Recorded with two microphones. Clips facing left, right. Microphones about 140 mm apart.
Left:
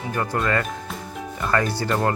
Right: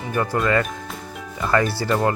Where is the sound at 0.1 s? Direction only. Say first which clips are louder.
Right 3 dB; 5° right (ahead or behind).